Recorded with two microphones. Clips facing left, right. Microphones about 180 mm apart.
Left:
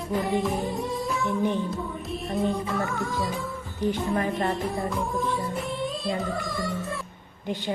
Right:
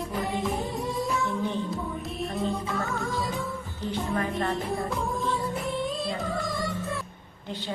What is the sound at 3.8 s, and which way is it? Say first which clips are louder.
Speech: left 7 dB; 15° left (ahead or behind).